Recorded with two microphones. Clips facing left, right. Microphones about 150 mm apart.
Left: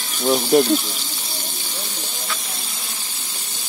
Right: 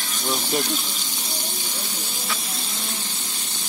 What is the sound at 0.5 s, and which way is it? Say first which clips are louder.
Speech: left 12 dB; 45° left (ahead or behind).